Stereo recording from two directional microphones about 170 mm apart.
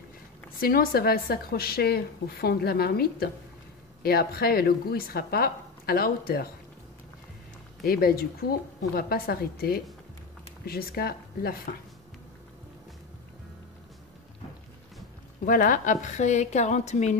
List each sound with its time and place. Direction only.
0.6 s a woman's voice: 60° left (ahead or behind)
7.8 s a woman's voice: 60° left (ahead or behind)
15.4 s a woman's voice: 55° left (ahead or behind)